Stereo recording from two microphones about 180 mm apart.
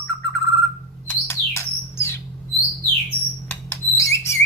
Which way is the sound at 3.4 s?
15° left (ahead or behind).